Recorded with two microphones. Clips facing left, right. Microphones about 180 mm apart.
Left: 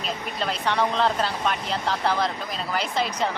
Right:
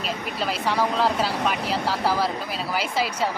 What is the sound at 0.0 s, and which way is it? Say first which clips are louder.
A woman's voice: right 1 dB; 5° right (ahead or behind).